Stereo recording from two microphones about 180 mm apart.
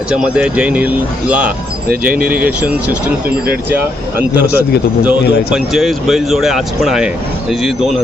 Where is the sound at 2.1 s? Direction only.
55° right (ahead or behind).